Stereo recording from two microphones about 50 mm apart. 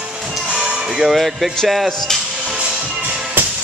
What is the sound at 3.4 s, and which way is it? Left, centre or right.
Music, right.